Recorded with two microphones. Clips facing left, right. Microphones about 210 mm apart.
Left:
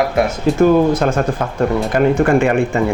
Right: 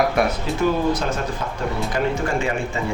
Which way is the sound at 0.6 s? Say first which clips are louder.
Left 8 dB; 55° left (ahead or behind).